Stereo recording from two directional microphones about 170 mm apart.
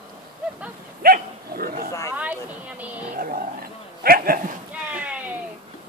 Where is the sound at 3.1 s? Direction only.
60° right (ahead or behind).